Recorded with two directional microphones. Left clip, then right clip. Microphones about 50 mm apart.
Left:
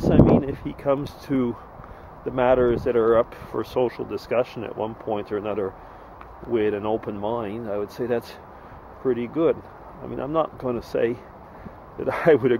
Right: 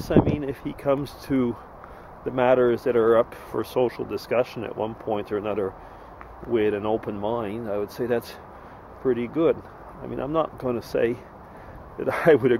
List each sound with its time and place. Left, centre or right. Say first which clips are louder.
0.0 s speech: left 4 dB; centre